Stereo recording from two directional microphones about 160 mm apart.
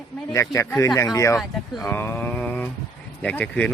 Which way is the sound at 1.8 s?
15° left (ahead or behind).